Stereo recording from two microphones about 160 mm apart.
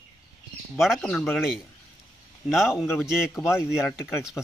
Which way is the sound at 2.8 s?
15° left (ahead or behind).